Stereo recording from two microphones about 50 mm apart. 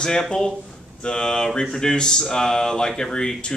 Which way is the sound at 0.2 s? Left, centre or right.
Centre.